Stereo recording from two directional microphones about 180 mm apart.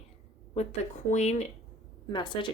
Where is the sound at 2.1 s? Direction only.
25° left (ahead or behind).